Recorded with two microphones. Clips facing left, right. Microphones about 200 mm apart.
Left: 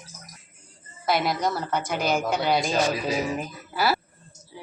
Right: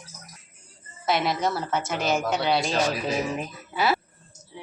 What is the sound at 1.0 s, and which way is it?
A woman's voice, centre (ahead or behind).